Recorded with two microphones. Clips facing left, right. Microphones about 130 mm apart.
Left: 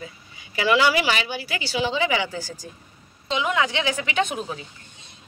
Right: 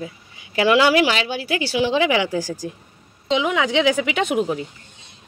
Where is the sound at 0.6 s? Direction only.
90° right.